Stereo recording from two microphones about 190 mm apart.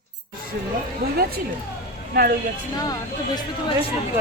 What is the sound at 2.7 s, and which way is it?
Speech, 20° left (ahead or behind).